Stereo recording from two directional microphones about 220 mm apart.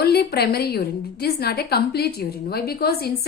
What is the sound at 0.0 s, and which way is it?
A woman's voice, 45° left (ahead or behind).